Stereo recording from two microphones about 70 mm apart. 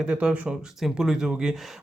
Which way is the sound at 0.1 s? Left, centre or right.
Centre.